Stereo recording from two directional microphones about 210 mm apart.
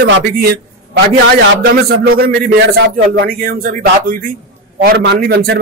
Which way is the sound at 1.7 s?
45° right (ahead or behind).